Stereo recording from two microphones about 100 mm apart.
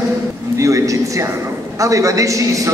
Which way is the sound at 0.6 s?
30° right (ahead or behind).